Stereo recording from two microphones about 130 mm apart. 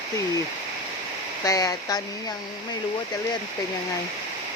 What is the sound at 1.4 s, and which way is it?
Speech, 30° left (ahead or behind).